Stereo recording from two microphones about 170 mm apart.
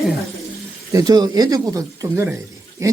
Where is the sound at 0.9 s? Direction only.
20° right (ahead or behind).